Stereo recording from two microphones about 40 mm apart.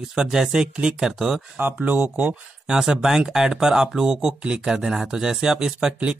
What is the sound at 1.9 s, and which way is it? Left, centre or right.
Speech, right.